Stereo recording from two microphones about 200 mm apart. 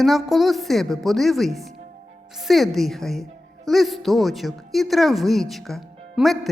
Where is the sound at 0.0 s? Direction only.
Centre (ahead or behind).